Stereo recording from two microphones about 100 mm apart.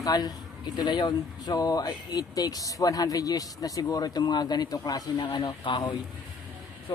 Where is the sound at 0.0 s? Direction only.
40° left (ahead or behind).